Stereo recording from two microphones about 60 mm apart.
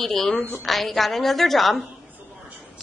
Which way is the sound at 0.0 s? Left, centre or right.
Centre.